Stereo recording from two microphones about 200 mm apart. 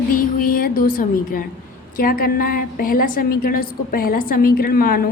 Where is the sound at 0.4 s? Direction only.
45° left (ahead or behind).